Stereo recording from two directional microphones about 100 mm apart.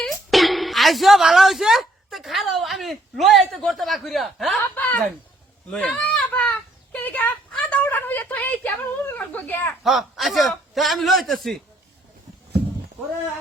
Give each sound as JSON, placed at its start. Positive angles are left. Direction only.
{"t": 0.0, "sound": "a woman's voice", "side_deg": 0}
{"t": 4.7, "sound": "speech", "side_deg": 20}
{"t": 5.7, "sound": "a sound", "side_deg": 15}
{"t": 7.6, "sound": "speech", "side_deg": 15}
{"t": 9.8, "sound": "a man's voice", "side_deg": 0}